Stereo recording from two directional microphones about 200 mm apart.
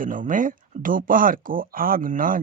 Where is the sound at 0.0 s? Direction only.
40° right (ahead or behind).